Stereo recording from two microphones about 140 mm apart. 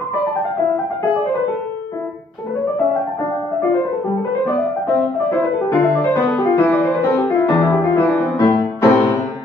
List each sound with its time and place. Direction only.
5.7 s music: 20° left (ahead or behind)